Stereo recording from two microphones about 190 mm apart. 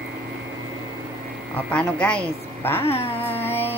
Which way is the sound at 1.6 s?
5° left (ahead or behind).